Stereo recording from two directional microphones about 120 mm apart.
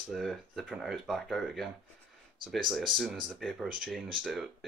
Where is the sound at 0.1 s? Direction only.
Centre (ahead or behind).